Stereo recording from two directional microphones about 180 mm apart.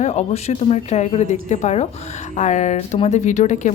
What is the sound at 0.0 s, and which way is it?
Speech, 40° left (ahead or behind).